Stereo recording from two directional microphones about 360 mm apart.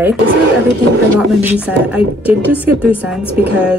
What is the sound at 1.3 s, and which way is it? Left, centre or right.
A woman's voice, centre.